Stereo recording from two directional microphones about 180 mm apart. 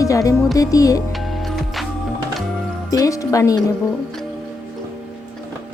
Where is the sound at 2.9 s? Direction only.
20° left (ahead or behind).